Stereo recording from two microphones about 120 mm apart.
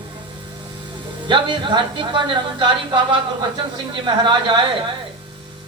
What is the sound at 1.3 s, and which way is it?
Speech, 40° right (ahead or behind).